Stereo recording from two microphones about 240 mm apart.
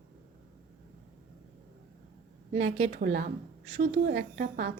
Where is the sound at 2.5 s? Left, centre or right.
Right.